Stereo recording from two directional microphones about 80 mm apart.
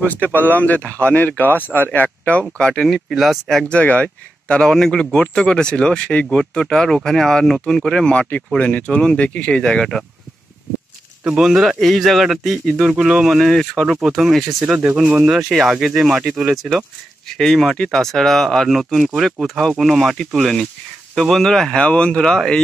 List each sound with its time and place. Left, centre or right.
0.0 s speech: left
2.5 s a man's voice: centre
3.6 s speech: centre
11.2 s a man's voice: centre